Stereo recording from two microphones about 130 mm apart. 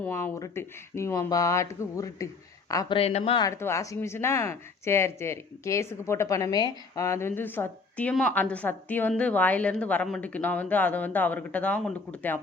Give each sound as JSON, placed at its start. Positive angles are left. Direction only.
{"t": 0.2, "sound": "speech", "side_deg": 25}
{"t": 2.9, "sound": "speech", "side_deg": 55}
{"t": 3.5, "sound": "a woman's voice", "side_deg": 20}